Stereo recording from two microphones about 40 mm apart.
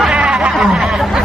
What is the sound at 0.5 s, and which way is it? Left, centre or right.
Speech, centre.